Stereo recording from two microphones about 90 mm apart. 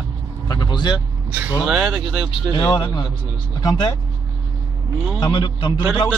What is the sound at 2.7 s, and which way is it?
A man's voice, 55° left (ahead or behind).